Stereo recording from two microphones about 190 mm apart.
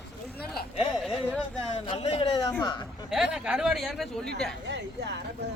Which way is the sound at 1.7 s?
35° left (ahead or behind).